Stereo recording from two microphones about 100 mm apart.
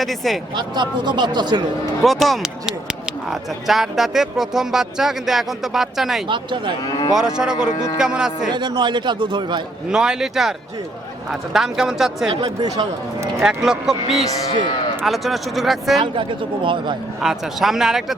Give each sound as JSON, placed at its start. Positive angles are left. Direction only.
{"t": 0.0, "sound": "speech", "side_deg": 0}
{"t": 0.5, "sound": "a man's voice", "side_deg": -45}
{"t": 2.0, "sound": "speech", "side_deg": 0}
{"t": 6.2, "sound": "a man's voice", "side_deg": -50}
{"t": 6.8, "sound": "speech", "side_deg": 40}
{"t": 7.1, "sound": "speech", "side_deg": -5}
{"t": 8.5, "sound": "a man's voice", "side_deg": -45}
{"t": 9.9, "sound": "speech", "side_deg": -5}
{"t": 12.6, "sound": "speech", "side_deg": -35}
{"t": 13.4, "sound": "speech", "side_deg": -5}
{"t": 16.1, "sound": "speech", "side_deg": -55}
{"t": 17.2, "sound": "speech", "side_deg": -5}